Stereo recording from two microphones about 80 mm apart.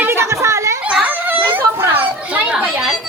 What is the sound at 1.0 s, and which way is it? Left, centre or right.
Children playing, right.